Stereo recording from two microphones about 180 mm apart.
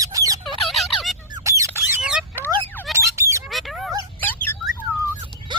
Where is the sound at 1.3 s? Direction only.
15° right (ahead or behind).